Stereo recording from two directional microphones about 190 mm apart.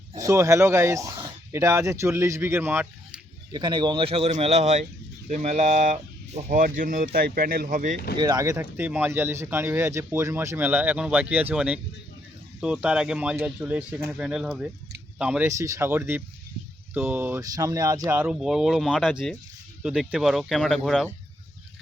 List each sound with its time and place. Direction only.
0.2 s speech: 15° right (ahead or behind)
3.5 s speech: 25° right (ahead or behind); by 7.9 s 45° right (ahead or behind)
8.1 s speech: 20° right (ahead or behind); by 15.4 s 5° right (ahead or behind)
15.4 s speech: 15° right (ahead or behind); by 21.1 s centre (ahead or behind)